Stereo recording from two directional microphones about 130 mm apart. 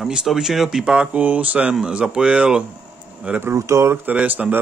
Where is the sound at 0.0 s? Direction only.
5° right (ahead or behind).